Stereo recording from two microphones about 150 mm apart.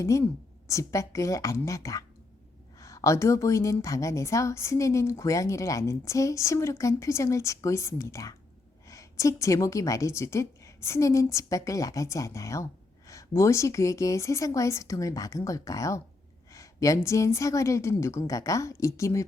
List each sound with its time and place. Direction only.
0.0 s a woman's voice: 20° left (ahead or behind)